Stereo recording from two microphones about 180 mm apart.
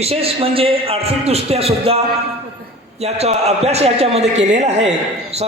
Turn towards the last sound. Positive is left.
turn(degrees=-40)  # may be behind; listen again after turning